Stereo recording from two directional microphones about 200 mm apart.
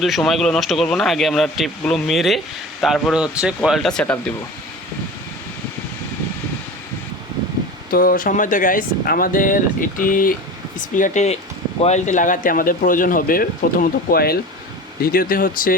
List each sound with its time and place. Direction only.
0.0 s speech: centre (ahead or behind)
7.9 s speech: 45° left (ahead or behind)